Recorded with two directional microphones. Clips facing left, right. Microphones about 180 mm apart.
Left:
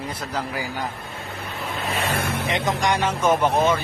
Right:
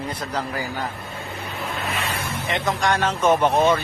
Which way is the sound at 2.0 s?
50° left (ahead or behind).